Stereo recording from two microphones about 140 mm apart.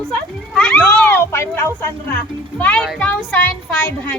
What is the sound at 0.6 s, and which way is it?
Cat, 5° left (ahead or behind).